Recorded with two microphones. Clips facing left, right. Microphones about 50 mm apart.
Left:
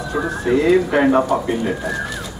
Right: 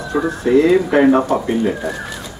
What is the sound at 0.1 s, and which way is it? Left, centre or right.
Speech, centre.